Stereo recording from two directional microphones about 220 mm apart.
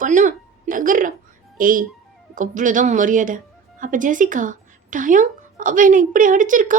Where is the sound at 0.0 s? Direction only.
35° right (ahead or behind).